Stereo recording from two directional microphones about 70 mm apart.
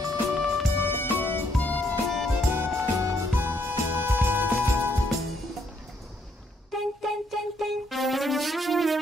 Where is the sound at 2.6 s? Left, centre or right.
Right.